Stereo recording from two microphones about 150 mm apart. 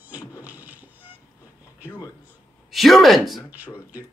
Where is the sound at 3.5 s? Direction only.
10° right (ahead or behind).